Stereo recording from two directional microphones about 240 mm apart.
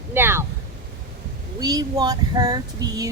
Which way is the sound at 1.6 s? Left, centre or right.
Centre.